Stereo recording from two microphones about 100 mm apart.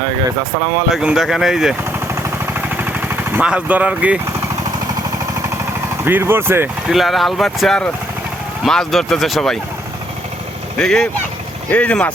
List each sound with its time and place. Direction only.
0.9 s speech: 5° right (ahead or behind)
2.1 s vehicle: 20° right (ahead or behind)
6.1 s speech: 20° right (ahead or behind)
6.8 s speech: centre (ahead or behind)
10.8 s speech: 5° left (ahead or behind)